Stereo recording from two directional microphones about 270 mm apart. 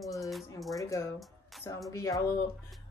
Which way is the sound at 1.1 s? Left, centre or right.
Centre.